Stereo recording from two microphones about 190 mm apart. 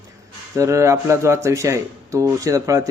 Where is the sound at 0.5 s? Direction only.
15° right (ahead or behind).